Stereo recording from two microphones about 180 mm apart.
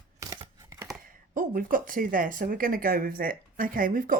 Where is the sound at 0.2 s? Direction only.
20° right (ahead or behind).